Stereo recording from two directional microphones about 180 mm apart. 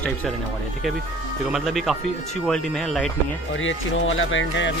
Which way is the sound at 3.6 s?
90° left.